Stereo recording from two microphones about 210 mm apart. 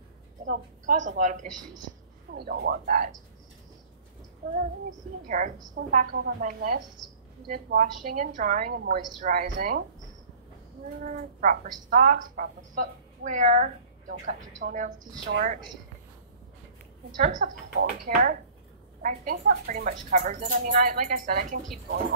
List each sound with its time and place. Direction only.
0.5 s a woman's voice: 40° right (ahead or behind)
2.3 s speech: 50° right (ahead or behind)
5.3 s a woman's voice: 40° right (ahead or behind)
11.1 s a woman's voice: 40° right (ahead or behind)
17.2 s a woman's voice: 40° right (ahead or behind)